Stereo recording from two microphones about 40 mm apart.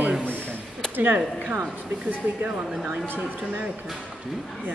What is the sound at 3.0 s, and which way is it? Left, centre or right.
Speech, right.